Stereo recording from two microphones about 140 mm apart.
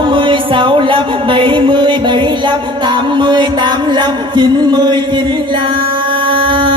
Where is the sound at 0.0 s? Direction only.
35° right (ahead or behind).